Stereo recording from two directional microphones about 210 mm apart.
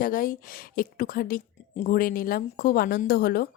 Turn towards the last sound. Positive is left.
turn(degrees=45)  # may be behind; listen again after turning